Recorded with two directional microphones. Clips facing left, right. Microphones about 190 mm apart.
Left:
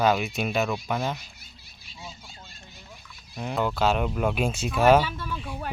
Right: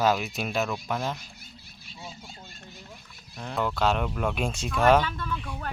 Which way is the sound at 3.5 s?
5° left (ahead or behind).